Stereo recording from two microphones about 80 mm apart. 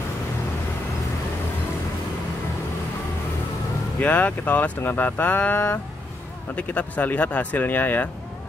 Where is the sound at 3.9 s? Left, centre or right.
Centre.